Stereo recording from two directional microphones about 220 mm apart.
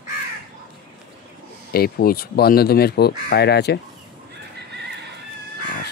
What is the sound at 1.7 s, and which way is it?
Speech, 45° left (ahead or behind).